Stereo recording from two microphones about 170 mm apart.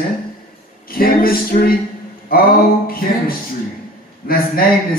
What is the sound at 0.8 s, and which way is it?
Speech, 60° left (ahead or behind).